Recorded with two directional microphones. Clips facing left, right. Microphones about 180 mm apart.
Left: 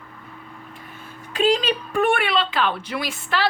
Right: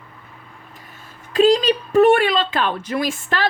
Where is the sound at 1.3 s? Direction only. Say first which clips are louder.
Right 5 dB; 40° right (ahead or behind).